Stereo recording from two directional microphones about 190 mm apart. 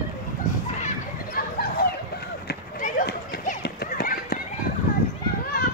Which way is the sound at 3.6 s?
60° left (ahead or behind).